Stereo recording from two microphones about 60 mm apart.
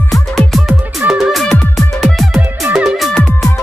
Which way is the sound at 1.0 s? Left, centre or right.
Right.